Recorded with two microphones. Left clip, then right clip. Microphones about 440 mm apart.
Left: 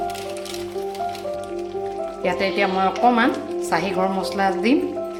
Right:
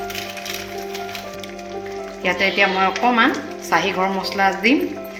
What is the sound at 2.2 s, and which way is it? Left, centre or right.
Speech, centre.